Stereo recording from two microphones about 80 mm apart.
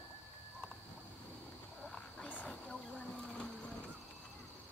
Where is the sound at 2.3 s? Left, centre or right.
Centre.